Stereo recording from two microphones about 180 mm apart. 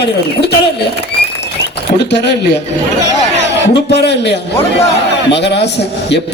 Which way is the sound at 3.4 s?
70° left (ahead or behind).